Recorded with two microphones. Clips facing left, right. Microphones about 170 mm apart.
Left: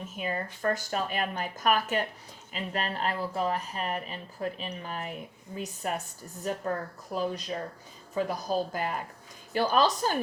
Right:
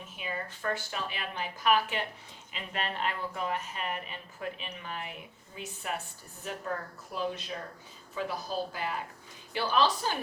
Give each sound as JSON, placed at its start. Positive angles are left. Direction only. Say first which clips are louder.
{"t": 0.0, "sound": "speech", "louder": "left 5 dB", "side_deg": 40}